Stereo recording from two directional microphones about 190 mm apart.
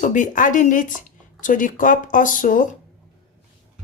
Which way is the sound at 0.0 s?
40° left (ahead or behind).